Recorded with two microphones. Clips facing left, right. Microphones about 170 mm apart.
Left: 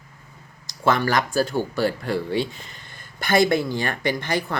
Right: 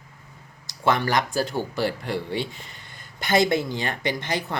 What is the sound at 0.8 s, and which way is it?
Speech, 20° right (ahead or behind).